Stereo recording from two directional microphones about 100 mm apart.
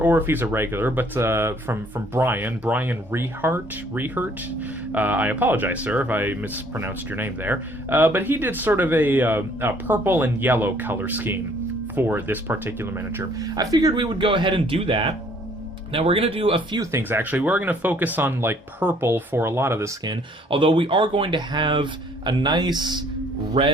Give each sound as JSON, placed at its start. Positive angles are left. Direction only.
{"t": 0.0, "sound": "speech", "side_deg": -20}
{"t": 13.4, "sound": "speech", "side_deg": -40}
{"t": 17.0, "sound": "speech", "side_deg": -20}
{"t": 20.1, "sound": "speech", "side_deg": -60}
{"t": 23.6, "sound": "speech", "side_deg": -70}